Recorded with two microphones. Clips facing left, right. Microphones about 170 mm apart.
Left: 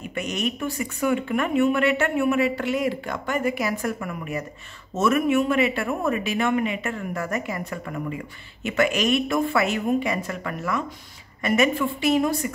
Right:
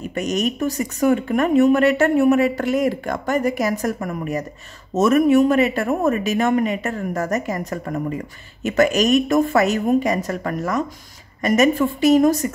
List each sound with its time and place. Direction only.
0.0 s speech: 40° right (ahead or behind)